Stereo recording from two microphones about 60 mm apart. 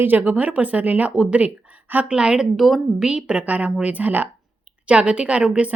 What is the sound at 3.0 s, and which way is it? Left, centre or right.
Speech, centre.